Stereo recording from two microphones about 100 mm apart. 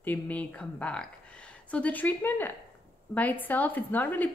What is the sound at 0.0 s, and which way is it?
A woman's voice, 15° left (ahead or behind).